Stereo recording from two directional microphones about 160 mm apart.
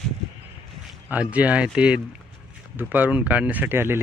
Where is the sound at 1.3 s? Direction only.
10° right (ahead or behind).